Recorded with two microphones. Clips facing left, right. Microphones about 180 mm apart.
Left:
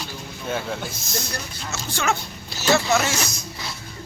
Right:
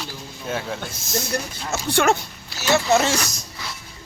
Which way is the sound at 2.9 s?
30° right (ahead or behind).